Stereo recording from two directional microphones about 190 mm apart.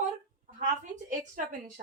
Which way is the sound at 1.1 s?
45° right (ahead or behind).